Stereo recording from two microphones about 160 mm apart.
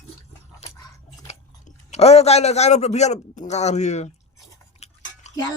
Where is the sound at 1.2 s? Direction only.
45° left (ahead or behind).